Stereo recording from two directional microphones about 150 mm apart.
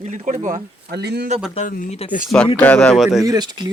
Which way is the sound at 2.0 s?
40° left (ahead or behind).